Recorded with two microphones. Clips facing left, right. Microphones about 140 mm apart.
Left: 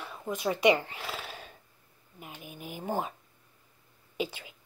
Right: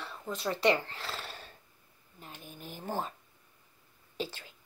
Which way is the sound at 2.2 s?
10° left (ahead or behind).